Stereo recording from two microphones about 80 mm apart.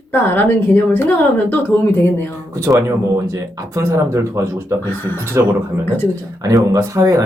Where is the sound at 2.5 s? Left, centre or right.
Right.